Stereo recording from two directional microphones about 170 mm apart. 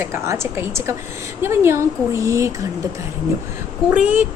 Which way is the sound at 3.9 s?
10° right (ahead or behind).